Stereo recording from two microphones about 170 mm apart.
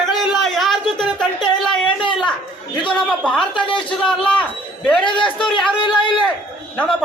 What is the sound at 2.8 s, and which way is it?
A man's voice, 5° left (ahead or behind).